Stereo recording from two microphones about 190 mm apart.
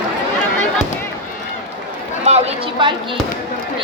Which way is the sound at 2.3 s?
35° right (ahead or behind).